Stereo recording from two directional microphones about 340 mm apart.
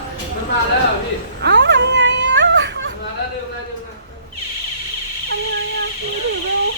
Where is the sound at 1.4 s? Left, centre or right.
Right.